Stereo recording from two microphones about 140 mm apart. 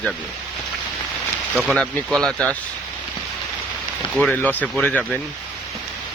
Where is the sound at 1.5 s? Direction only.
Centre (ahead or behind).